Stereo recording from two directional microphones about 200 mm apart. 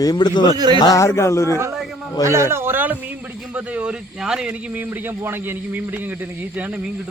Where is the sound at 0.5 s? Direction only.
20° right (ahead or behind).